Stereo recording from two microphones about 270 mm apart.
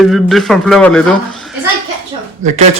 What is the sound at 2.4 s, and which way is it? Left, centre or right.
Speech, right.